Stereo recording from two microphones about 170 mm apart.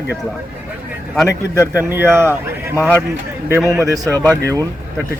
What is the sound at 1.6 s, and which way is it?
Speech, 15° right (ahead or behind).